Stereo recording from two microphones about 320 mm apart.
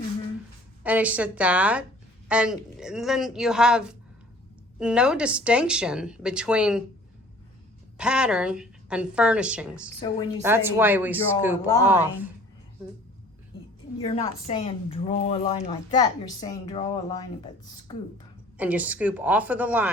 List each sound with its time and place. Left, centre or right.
0.9 s speech: centre
7.9 s speech: centre
11.6 s a woman's voice: centre
11.9 s speech: centre
14.0 s a woman's voice: centre
18.5 s speech: centre